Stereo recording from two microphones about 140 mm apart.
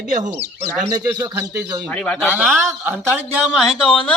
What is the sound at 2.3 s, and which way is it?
Speech, 10° right (ahead or behind).